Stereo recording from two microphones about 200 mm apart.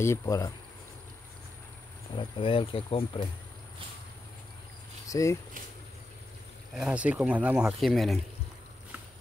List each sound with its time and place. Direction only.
0.0 s speech: 15° left (ahead or behind)
2.1 s speech: 25° left (ahead or behind)
5.0 s speech: 15° left (ahead or behind)
6.7 s speech: 5° right (ahead or behind)